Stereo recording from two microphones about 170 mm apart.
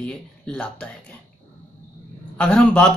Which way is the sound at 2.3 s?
5° left (ahead or behind).